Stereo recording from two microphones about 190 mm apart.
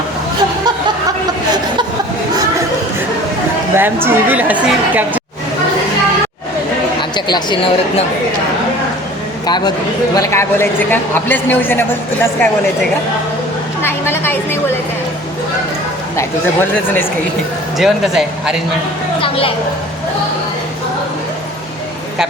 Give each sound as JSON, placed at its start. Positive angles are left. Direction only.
{"t": 3.8, "sound": "a woman's voice", "side_deg": -10}
{"t": 7.3, "sound": "speech", "side_deg": 25}
{"t": 9.5, "sound": "a woman's voice", "side_deg": 20}
{"t": 13.8, "sound": "a woman's voice", "side_deg": 10}
{"t": 17.7, "sound": "speech", "side_deg": 0}